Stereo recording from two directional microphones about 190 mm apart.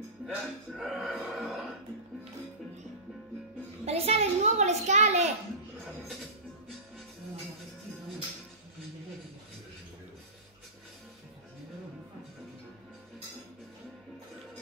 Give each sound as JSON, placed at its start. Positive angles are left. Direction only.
{"t": 0.3, "sound": "music", "side_deg": 0}
{"t": 3.8, "sound": "a child's voice", "side_deg": -30}